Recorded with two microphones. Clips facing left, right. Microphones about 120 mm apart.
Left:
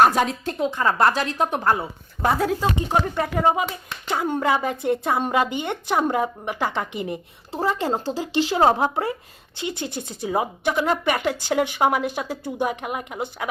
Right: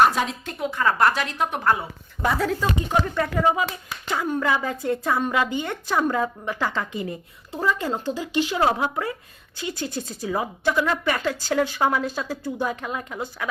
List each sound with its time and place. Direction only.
0.0 s speech: 45° left (ahead or behind)
0.6 s speech: 30° left (ahead or behind)